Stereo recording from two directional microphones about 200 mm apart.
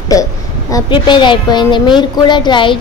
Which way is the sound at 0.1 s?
15° left (ahead or behind).